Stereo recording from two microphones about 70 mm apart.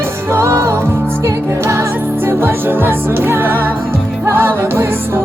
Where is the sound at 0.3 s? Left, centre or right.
Right.